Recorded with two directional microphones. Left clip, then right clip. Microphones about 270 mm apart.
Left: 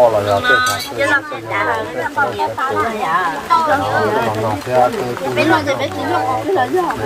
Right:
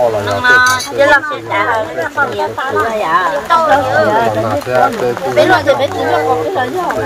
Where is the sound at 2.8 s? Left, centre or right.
Right.